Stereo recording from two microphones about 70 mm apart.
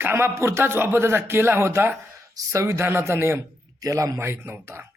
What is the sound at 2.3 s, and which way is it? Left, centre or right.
A man's voice, right.